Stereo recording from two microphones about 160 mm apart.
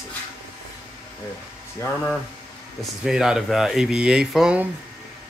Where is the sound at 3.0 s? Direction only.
5° right (ahead or behind).